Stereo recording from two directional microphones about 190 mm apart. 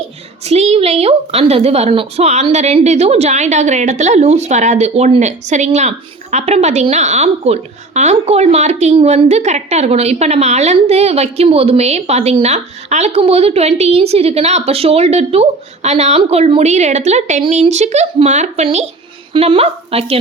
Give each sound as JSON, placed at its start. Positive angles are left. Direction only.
{"t": 0.4, "sound": "a woman's voice", "side_deg": -35}